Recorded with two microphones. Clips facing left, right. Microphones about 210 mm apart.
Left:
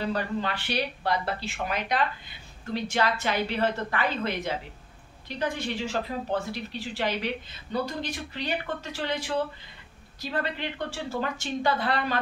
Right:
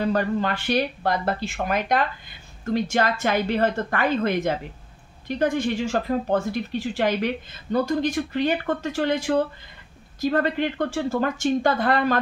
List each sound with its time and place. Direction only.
0.1 s speech: 45° right (ahead or behind)